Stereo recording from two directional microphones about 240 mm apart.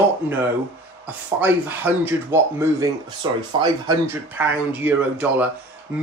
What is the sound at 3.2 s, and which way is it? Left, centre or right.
Speech, centre.